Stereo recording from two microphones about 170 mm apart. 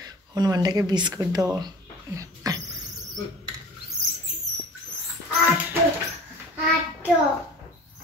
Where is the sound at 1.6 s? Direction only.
20° right (ahead or behind).